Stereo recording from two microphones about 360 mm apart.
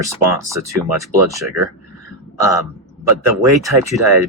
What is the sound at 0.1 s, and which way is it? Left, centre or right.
Speech, centre.